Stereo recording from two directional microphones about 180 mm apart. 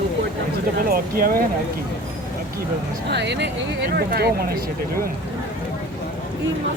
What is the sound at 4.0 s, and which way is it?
Speech, 60° right (ahead or behind).